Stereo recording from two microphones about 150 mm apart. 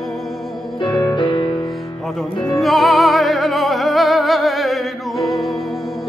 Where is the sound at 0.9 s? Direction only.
30° left (ahead or behind).